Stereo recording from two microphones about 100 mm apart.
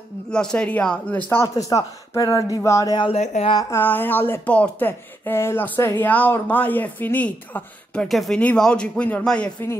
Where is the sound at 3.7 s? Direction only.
20° left (ahead or behind).